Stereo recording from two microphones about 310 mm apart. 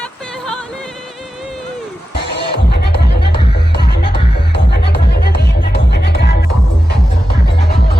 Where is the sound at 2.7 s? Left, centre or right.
Left.